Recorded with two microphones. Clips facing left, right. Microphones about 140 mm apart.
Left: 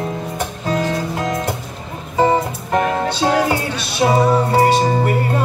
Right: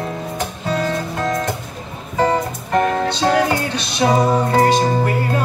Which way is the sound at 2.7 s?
5° left (ahead or behind).